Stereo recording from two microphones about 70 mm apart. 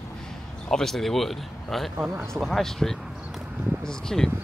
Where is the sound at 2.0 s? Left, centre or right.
Right.